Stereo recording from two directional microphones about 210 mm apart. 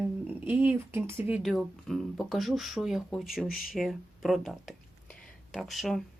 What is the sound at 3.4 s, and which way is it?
Speech, 45° left (ahead or behind).